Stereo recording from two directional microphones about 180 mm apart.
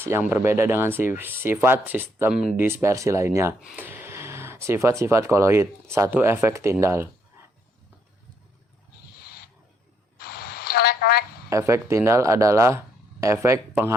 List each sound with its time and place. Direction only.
0.0 s speech: 10° right (ahead or behind)
2.6 s speech: 15° right (ahead or behind)
10.2 s a sound: 60° left (ahead or behind)
11.4 s speech: 15° right (ahead or behind)